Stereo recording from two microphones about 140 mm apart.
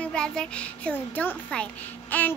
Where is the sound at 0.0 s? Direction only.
5° left (ahead or behind).